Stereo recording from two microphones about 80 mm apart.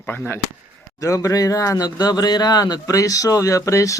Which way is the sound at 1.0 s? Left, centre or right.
Left.